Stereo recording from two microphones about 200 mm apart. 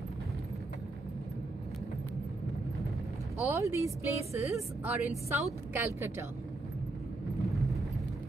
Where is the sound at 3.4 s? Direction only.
15° right (ahead or behind).